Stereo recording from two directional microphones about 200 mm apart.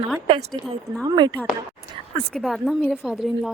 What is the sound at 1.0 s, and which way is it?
Speech, 20° right (ahead or behind).